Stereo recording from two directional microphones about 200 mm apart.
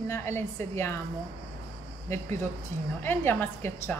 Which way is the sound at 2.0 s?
10° left (ahead or behind).